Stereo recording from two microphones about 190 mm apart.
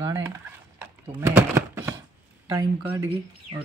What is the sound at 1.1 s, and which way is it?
Typing, 15° right (ahead or behind).